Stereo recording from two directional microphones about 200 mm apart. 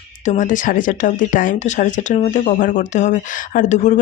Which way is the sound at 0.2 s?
40° left (ahead or behind).